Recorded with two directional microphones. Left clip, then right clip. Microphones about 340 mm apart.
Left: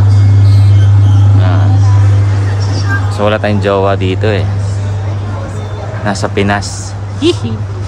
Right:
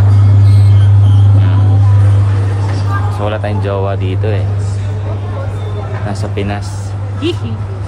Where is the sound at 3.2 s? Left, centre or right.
Left.